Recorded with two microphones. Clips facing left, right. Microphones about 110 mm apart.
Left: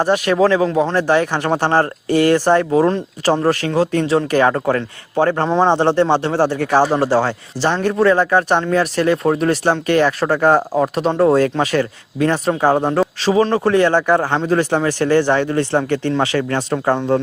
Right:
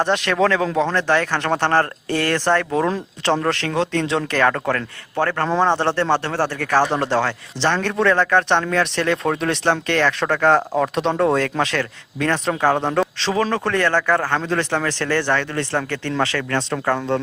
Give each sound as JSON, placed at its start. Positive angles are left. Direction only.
{"t": 0.0, "sound": "speech", "side_deg": 10}